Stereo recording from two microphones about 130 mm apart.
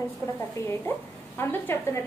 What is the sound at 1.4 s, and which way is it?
Speech, 15° left (ahead or behind).